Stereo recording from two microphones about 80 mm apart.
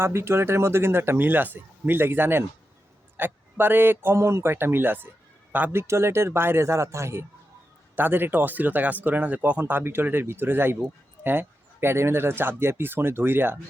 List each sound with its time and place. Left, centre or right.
0.0 s a man's voice: right
5.7 s speech: right